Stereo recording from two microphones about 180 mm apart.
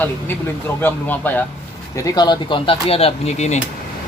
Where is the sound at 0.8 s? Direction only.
10° left (ahead or behind).